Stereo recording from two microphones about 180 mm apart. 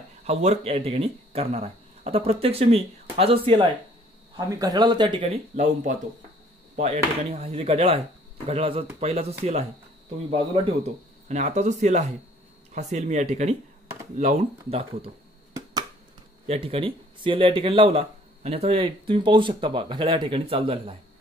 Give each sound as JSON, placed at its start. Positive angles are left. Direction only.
{"t": 0.2, "sound": "speech", "side_deg": -35}
{"t": 16.4, "sound": "speech", "side_deg": -30}